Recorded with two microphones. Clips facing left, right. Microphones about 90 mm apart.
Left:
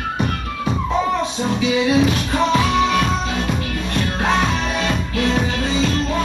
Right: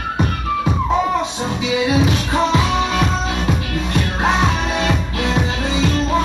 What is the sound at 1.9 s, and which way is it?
Music, 20° right (ahead or behind).